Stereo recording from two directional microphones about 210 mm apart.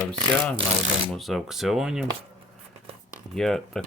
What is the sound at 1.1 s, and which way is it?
Speech, centre (ahead or behind).